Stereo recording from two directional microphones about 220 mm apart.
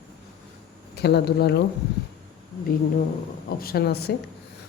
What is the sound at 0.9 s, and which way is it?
Speech, 50° left (ahead or behind).